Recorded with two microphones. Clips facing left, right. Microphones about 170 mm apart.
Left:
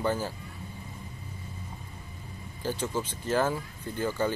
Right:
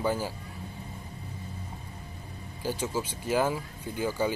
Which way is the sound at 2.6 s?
10° right (ahead or behind).